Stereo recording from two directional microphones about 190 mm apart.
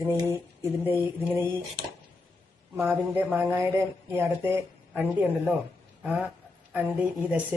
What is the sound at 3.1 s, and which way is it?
Speech, 10° right (ahead or behind).